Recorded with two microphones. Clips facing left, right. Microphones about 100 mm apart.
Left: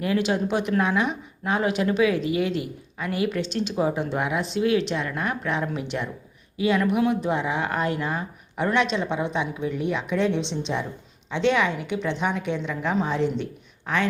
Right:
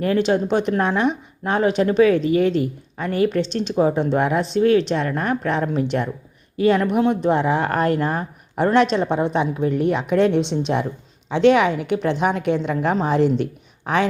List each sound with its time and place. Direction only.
0.3 s a woman's voice: 35° right (ahead or behind); by 13.0 s 55° right (ahead or behind)
13.1 s a woman's voice: 70° right (ahead or behind)